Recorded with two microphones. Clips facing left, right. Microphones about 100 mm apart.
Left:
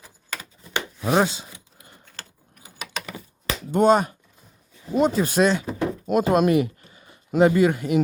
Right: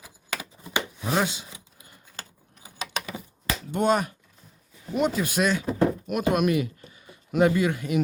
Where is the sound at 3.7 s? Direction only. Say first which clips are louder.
Left 6 dB; 35° left (ahead or behind).